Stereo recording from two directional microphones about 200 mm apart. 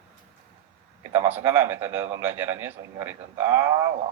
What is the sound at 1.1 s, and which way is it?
A man's voice, 10° right (ahead or behind).